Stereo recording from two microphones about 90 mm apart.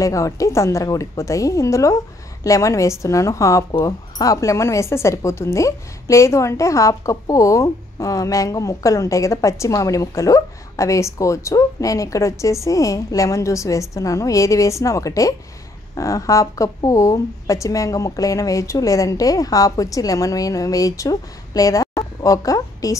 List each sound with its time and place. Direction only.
0.0 s speech: 35° left (ahead or behind)